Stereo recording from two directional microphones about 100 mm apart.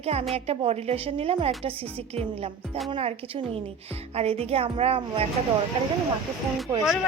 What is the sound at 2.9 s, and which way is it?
A woman's voice, 80° right.